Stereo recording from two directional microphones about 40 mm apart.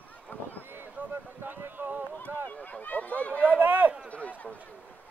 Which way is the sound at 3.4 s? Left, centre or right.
Right.